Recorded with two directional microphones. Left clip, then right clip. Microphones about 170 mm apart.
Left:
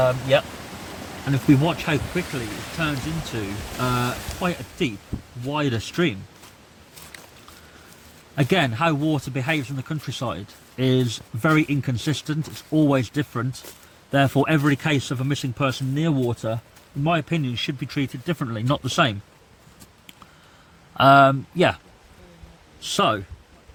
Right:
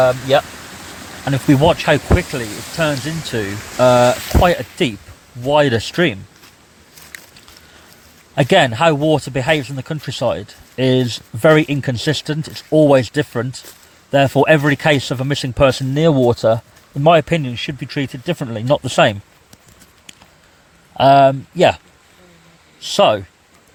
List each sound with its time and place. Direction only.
0.0 s speech: 25° right (ahead or behind)
7.1 s a sound: 10° left (ahead or behind)
8.4 s speech: 30° right (ahead or behind)
17.4 s speech: 15° right (ahead or behind)
20.9 s speech: 15° right (ahead or behind)
22.8 s speech: 20° right (ahead or behind)